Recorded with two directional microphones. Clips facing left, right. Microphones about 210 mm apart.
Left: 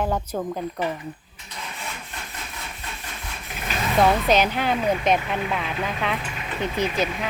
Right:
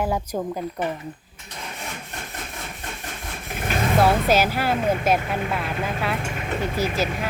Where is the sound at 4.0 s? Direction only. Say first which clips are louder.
Left 1 dB; 5° right (ahead or behind).